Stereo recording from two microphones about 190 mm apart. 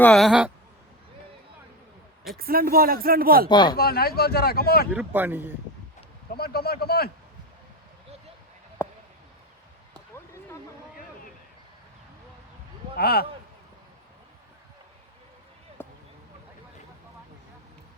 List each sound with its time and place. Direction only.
0.0 s speech: centre (ahead or behind)
2.4 s speech: 50° right (ahead or behind)
3.5 s speech: 20° left (ahead or behind)
3.8 s speech: 55° left (ahead or behind)
4.9 s speech: 10° right (ahead or behind)
6.3 s speech: 55° left (ahead or behind)
8.8 s a sound: 10° left (ahead or behind)
13.0 s speech: 55° left (ahead or behind)
15.8 s a sound: 10° left (ahead or behind)